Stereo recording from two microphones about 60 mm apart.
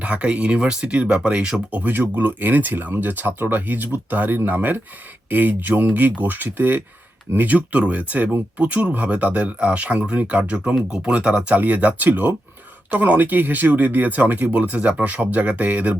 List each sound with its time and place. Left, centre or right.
0.0 s speech: right
1.7 s speech: right